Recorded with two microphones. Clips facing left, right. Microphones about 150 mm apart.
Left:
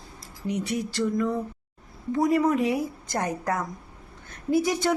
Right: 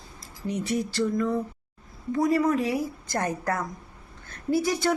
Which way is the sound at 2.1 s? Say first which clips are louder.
Left 1 dB; 20° left (ahead or behind).